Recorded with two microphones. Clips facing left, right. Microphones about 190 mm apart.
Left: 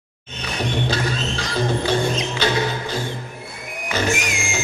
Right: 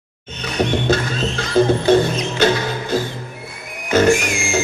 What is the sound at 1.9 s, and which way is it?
Music, 50° right (ahead or behind).